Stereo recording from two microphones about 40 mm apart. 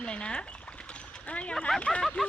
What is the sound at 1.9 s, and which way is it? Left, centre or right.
Speech, centre.